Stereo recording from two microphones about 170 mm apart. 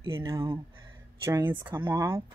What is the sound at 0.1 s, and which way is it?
Speech, 20° right (ahead or behind).